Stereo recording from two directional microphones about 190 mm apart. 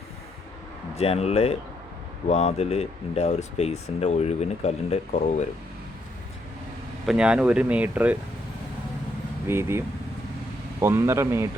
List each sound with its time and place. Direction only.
0.9 s speech: 35° left (ahead or behind)
7.0 s speech: 5° right (ahead or behind)
9.5 s speech: 15° right (ahead or behind)